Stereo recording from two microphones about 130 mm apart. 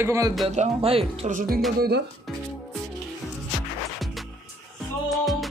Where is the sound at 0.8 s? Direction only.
45° right (ahead or behind).